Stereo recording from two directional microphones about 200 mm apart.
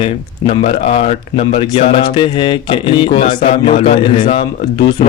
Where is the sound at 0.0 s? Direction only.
30° left (ahead or behind).